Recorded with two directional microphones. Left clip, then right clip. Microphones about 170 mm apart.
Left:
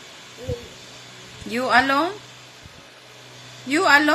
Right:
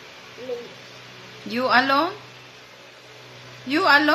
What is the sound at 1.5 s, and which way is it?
Speech, 15° left (ahead or behind).